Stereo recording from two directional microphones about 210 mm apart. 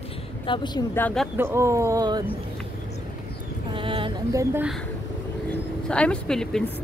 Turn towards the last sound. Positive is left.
turn(degrees=0)  # may be behind; listen again after turning